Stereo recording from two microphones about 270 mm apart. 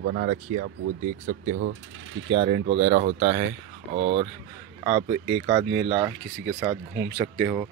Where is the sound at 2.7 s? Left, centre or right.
Right; by 6.1 s centre.